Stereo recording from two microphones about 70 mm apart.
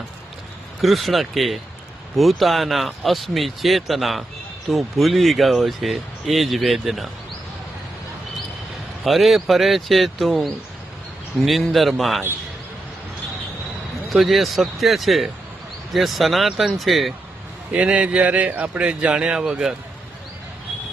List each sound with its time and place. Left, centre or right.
0.8 s speech: centre
9.0 s speech: centre
14.1 s speech: centre
17.7 s speech: centre